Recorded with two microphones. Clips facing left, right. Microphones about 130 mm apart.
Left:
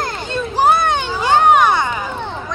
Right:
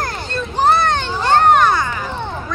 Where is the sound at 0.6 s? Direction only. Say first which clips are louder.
Even; 10° left (ahead or behind).